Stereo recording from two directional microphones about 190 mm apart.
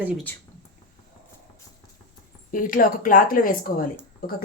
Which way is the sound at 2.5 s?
45° left (ahead or behind).